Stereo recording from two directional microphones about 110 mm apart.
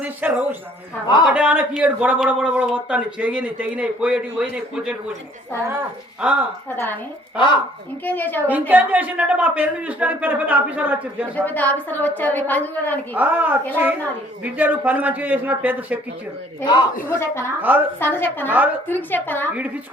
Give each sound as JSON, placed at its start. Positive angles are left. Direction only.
{"t": 0.0, "sound": "speech", "side_deg": -15}
{"t": 1.0, "sound": "a man's voice", "side_deg": 45}
{"t": 1.3, "sound": "speech", "side_deg": -10}
{"t": 5.5, "sound": "speech", "side_deg": -20}
{"t": 6.2, "sound": "speech", "side_deg": -10}
{"t": 6.7, "sound": "a woman's voice", "side_deg": 20}
{"t": 8.0, "sound": "a woman's voice", "side_deg": 15}
{"t": 8.4, "sound": "speech", "side_deg": -15}
{"t": 11.3, "sound": "a woman's voice", "side_deg": 15}
{"t": 13.1, "sound": "speech", "side_deg": -15}
{"t": 17.1, "sound": "a woman's voice", "side_deg": 25}
{"t": 17.6, "sound": "speech", "side_deg": -15}
{"t": 18.0, "sound": "a woman's voice", "side_deg": 20}